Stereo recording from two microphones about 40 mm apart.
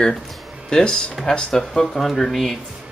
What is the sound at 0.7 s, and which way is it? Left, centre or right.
Speech, centre.